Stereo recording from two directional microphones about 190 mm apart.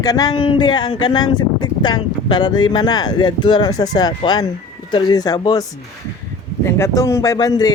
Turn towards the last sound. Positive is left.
turn(degrees=20)  # may be behind; listen again after turning